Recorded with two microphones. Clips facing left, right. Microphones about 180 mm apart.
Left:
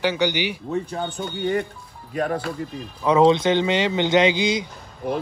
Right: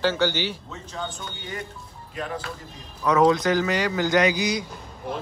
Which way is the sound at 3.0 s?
25° left (ahead or behind).